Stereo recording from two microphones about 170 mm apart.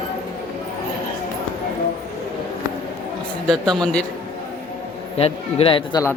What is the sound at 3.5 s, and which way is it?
Speech, 5° left (ahead or behind).